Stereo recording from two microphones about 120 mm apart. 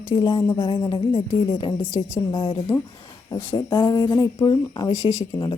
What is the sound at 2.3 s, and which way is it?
Speech, 50° left (ahead or behind).